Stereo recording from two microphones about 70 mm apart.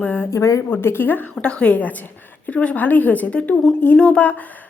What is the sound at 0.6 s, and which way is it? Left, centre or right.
Speech, left.